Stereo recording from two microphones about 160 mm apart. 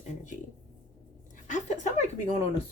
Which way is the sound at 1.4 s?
50° left (ahead or behind).